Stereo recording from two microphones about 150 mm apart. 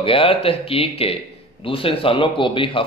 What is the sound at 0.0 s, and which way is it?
A man's voice, 35° left (ahead or behind).